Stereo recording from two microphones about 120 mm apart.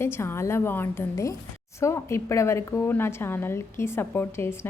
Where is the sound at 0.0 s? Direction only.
20° left (ahead or behind).